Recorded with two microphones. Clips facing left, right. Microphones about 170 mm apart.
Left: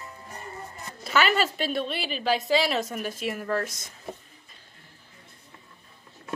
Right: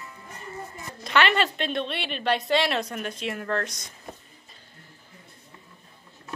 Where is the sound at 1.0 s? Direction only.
5° left (ahead or behind).